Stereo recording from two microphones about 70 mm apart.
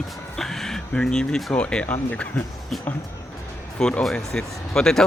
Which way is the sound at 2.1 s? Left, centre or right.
Left.